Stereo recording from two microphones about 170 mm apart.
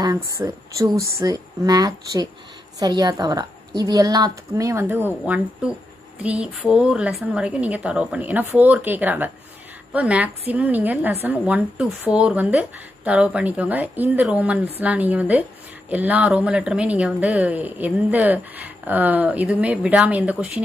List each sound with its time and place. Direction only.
0.0 s a woman's voice: 20° right (ahead or behind)